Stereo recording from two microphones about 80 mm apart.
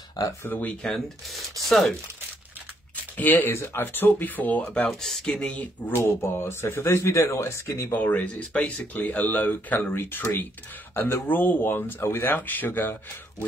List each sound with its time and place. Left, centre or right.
0.4 s speech: left
0.8 s speech: centre
3.2 s speech: left
4.8 s speech: centre
6.0 s speech: left
7.9 s speech: left